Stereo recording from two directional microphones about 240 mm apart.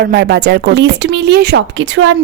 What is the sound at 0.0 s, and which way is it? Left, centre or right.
A woman's voice, right.